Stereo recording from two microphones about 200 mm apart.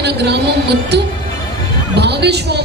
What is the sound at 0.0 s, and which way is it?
A woman's voice, 55° right (ahead or behind).